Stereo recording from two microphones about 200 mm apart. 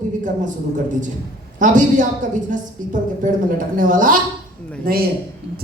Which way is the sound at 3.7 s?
40° right (ahead or behind).